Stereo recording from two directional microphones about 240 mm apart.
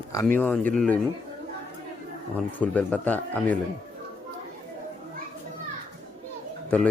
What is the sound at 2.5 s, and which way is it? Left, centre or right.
A man's voice, centre.